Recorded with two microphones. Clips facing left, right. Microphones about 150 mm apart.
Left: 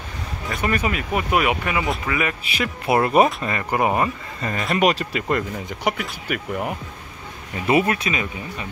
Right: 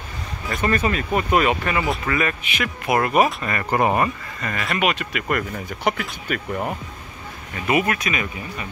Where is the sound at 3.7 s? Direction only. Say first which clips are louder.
Right 1 dB; 15° left (ahead or behind).